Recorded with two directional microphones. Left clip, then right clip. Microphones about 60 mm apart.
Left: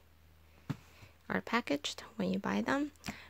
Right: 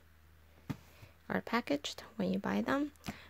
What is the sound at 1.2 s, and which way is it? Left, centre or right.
Speech, centre.